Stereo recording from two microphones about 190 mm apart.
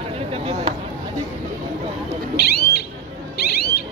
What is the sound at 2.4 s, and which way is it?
Owl, 55° left (ahead or behind).